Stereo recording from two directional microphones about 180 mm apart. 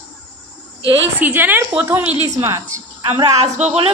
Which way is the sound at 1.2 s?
10° right (ahead or behind).